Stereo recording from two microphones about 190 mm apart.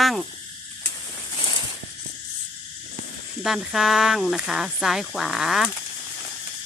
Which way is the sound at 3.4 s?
Centre (ahead or behind).